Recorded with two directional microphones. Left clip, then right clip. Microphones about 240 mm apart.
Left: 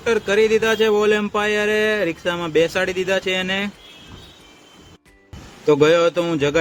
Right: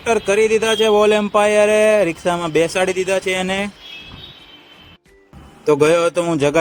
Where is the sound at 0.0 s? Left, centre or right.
Right.